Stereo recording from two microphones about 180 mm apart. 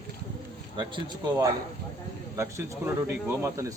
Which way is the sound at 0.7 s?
25° right (ahead or behind).